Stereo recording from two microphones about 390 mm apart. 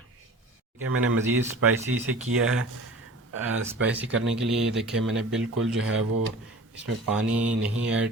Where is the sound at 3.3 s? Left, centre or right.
Right.